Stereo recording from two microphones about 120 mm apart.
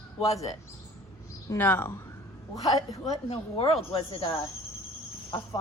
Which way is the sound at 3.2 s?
55° left (ahead or behind).